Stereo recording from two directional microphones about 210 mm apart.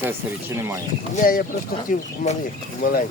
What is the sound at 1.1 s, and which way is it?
Speech, 40° left (ahead or behind).